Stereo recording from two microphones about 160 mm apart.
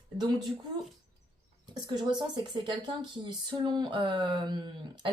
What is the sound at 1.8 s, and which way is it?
Speech, 30° right (ahead or behind).